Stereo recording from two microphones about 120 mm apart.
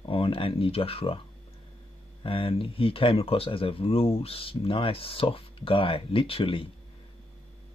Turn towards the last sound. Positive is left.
turn(degrees=50)  # may be behind; listen again after turning